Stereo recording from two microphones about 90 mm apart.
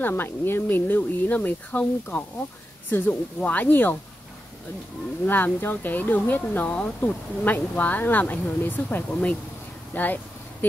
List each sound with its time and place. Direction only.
0.0 s speech: 25° left (ahead or behind)
2.9 s speech: 20° left (ahead or behind)
5.2 s speech: 20° left (ahead or behind)
9.9 s a sound: 20° left (ahead or behind)